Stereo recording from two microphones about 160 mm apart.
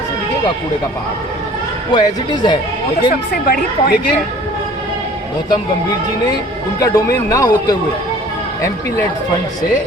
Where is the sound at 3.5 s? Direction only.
70° left (ahead or behind).